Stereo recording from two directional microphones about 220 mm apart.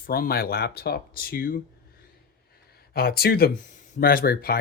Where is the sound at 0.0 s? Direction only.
40° left (ahead or behind).